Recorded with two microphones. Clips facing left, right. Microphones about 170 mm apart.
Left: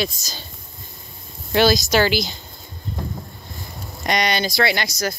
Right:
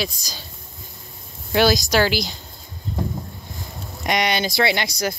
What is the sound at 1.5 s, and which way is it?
Speech, 10° right (ahead or behind).